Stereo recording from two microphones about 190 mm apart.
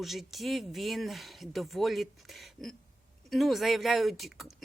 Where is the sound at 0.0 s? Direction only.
Centre (ahead or behind).